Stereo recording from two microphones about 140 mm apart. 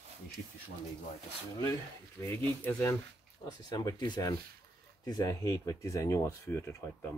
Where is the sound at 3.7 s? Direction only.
30° left (ahead or behind).